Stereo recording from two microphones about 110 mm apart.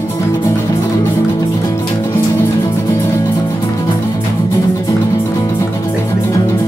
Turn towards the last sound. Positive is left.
turn(degrees=30)  # may be behind; listen again after turning